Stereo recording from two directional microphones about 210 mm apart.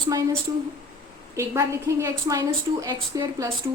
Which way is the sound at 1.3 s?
15° right (ahead or behind).